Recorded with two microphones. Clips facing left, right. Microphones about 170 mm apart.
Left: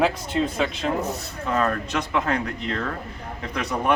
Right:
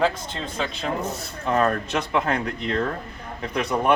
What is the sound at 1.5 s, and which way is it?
Speech, 35° right (ahead or behind).